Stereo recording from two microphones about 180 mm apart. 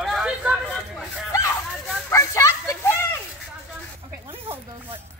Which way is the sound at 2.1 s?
15° left (ahead or behind).